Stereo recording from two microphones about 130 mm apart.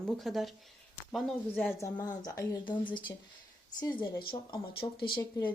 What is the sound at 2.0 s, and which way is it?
Speech, 30° left (ahead or behind).